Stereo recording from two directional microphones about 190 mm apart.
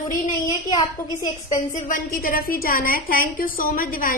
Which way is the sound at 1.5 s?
40° left (ahead or behind).